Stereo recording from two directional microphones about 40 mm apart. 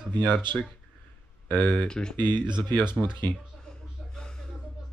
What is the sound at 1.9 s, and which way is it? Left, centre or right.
Speech, centre.